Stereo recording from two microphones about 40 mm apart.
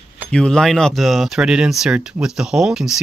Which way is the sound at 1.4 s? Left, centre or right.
Right.